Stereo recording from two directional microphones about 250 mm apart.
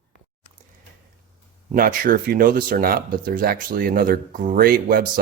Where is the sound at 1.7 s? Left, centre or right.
Right.